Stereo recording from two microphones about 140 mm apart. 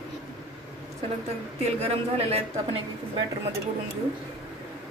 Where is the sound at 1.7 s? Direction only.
50° right (ahead or behind).